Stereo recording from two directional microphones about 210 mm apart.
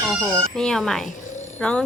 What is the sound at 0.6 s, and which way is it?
Speech, centre (ahead or behind).